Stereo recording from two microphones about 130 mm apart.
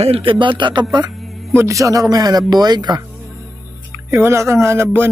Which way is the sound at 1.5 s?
20° right (ahead or behind).